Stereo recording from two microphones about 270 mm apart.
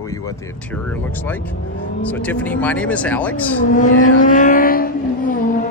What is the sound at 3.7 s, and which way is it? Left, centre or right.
Vehicle, left.